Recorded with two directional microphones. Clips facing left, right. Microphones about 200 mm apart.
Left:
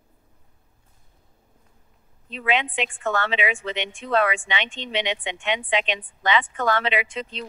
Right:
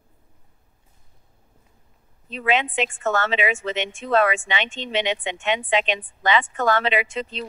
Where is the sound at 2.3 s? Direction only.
40° right (ahead or behind).